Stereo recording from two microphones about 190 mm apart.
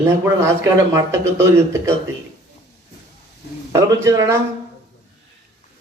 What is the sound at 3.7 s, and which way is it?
Speech, 15° right (ahead or behind).